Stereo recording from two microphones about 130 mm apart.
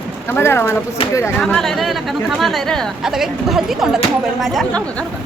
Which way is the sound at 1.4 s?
5° left (ahead or behind).